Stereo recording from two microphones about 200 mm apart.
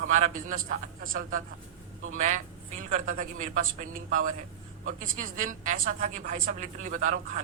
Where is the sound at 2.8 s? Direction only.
40° right (ahead or behind).